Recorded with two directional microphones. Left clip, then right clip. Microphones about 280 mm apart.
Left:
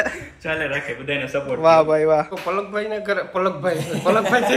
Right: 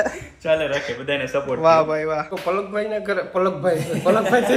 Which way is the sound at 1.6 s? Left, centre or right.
Centre.